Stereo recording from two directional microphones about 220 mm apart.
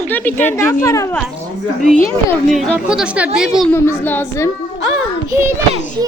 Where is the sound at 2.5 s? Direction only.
Centre (ahead or behind).